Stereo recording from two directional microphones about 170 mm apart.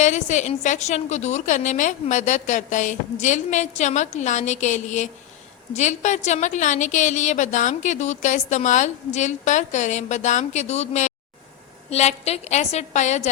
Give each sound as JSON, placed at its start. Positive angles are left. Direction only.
{"t": 0.0, "sound": "a woman's voice", "side_deg": 45}